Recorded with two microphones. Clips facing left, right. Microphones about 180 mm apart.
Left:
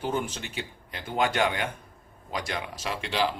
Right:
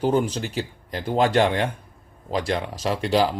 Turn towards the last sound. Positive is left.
turn(degrees=-40)  # may be behind; listen again after turning